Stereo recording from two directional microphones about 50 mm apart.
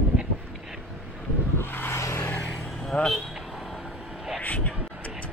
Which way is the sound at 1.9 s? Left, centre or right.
Left.